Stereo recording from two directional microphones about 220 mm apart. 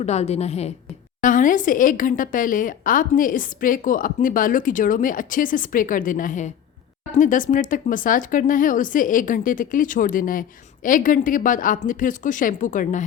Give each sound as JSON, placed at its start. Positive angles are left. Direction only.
{"t": 0.0, "sound": "a woman's voice", "side_deg": 30}